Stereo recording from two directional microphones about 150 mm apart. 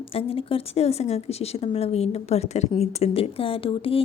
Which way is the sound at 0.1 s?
40° left (ahead or behind).